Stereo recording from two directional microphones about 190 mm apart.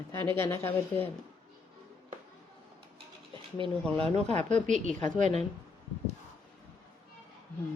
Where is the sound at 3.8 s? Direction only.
5° left (ahead or behind).